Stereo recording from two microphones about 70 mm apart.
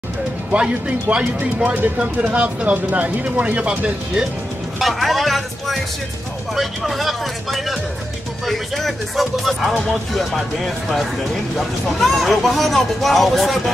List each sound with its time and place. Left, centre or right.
0.5 s speech: centre
4.7 s speech: centre